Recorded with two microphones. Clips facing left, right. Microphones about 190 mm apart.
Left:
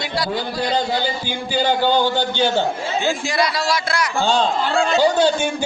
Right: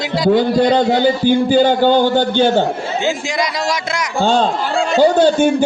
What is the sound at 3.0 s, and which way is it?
A man's voice, 20° right (ahead or behind).